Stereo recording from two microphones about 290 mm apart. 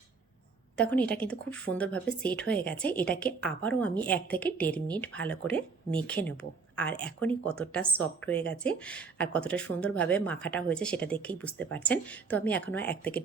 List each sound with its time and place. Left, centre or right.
0.8 s a woman's voice: centre